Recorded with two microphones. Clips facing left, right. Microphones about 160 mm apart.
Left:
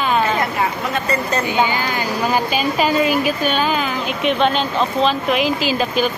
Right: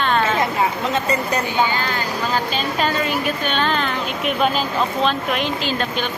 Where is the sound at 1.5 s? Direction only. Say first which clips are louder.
Left 2 dB; 15° left (ahead or behind).